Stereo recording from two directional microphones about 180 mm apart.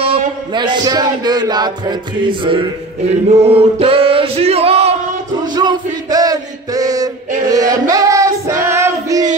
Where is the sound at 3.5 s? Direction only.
30° right (ahead or behind).